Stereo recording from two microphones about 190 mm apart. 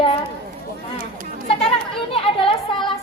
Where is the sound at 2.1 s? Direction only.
30° left (ahead or behind).